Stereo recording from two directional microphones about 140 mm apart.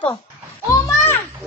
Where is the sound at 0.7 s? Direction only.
15° left (ahead or behind).